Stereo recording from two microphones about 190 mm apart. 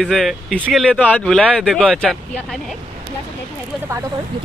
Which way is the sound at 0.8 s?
5° left (ahead or behind).